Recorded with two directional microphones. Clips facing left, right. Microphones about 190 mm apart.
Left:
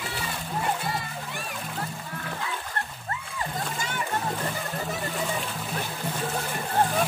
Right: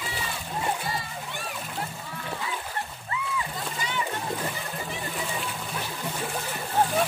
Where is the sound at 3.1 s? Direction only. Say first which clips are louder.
Right 2 dB; 45° left (ahead or behind).